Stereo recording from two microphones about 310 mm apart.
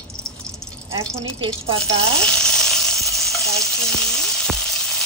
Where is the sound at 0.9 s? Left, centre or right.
Centre.